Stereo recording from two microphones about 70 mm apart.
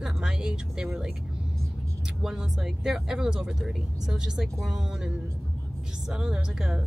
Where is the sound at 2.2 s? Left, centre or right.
Centre.